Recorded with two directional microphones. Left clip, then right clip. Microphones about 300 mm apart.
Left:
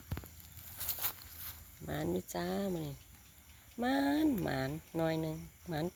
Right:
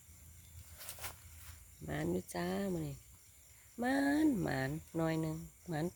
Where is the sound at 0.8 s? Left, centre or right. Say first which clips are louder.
Left 6 dB; left.